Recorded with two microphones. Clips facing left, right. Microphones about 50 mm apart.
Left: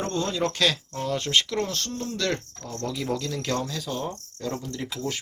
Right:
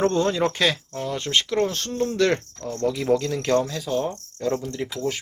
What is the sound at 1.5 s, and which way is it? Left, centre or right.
Speech, centre.